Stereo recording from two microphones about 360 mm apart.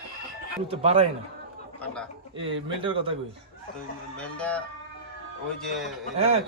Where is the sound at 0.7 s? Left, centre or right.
Centre.